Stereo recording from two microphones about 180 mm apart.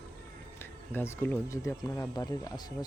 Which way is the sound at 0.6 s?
15° left (ahead or behind).